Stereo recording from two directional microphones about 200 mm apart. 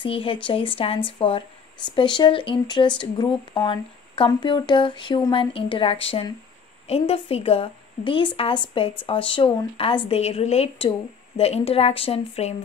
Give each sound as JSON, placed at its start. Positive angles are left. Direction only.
{"t": 0.0, "sound": "a woman's voice", "side_deg": 25}